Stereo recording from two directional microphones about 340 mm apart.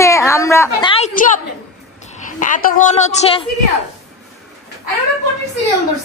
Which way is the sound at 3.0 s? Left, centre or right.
Centre.